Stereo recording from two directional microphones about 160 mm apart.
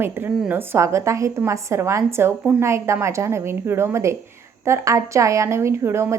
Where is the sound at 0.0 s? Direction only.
10° right (ahead or behind).